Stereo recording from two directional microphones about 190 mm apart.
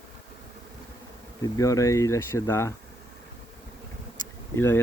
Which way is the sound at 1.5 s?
15° left (ahead or behind).